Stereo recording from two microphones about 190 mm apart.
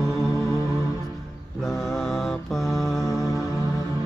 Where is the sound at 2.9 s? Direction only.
15° left (ahead or behind).